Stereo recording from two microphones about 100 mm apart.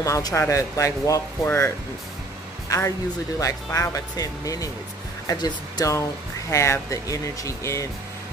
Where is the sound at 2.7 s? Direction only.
35° left (ahead or behind).